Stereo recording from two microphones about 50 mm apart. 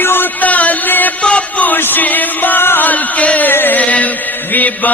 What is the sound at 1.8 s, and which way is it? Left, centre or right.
Chant, left.